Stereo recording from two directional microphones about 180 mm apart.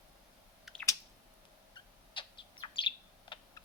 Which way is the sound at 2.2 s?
30° left (ahead or behind).